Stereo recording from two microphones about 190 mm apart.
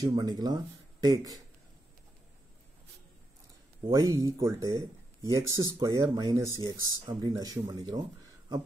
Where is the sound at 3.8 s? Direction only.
20° right (ahead or behind).